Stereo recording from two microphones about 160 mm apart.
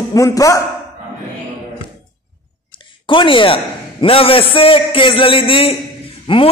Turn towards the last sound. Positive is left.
turn(degrees=35)  # may be behind; listen again after turning